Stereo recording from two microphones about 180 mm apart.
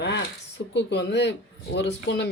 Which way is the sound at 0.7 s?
75° left (ahead or behind).